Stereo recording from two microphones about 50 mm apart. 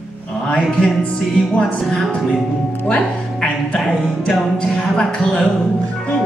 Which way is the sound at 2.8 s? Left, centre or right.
Left.